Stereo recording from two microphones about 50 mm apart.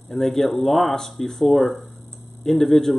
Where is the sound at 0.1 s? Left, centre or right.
Centre.